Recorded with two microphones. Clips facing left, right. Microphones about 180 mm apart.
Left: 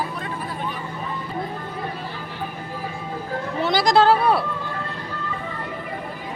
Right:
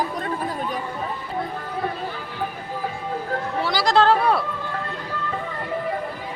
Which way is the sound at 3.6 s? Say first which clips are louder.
Left 2 dB; 20° left (ahead or behind).